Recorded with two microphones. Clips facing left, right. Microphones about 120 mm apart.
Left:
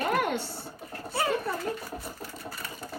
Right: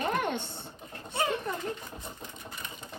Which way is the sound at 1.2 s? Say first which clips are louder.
Left 2 dB; 20° right (ahead or behind).